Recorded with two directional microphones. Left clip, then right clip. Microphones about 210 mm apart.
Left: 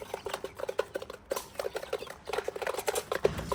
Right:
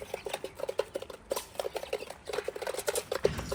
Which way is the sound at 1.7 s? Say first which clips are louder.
Even; centre (ahead or behind).